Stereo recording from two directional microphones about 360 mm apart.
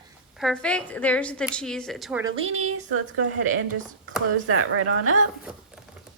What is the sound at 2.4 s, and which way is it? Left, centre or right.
A woman's voice, right.